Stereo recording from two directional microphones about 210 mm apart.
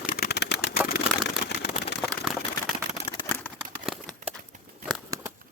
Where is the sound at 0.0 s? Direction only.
45° left (ahead or behind).